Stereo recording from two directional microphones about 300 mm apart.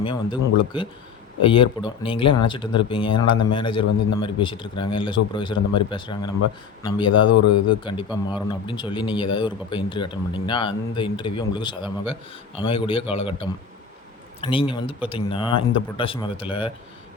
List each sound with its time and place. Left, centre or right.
0.0 s speech: centre
7.3 s speech: left
7.9 s speech: centre